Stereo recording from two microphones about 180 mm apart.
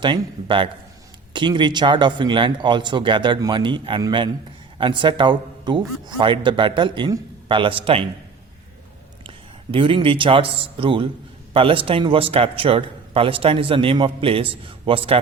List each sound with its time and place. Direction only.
0.0 s a man's voice: 25° right (ahead or behind)
9.7 s a man's voice: 30° right (ahead or behind)